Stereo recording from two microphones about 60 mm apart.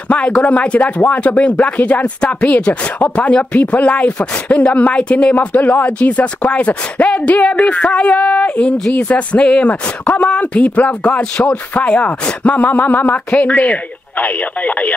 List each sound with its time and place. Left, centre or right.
0.1 s speech: left